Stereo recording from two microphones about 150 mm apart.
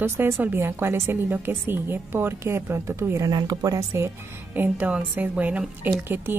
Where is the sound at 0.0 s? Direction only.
15° right (ahead or behind).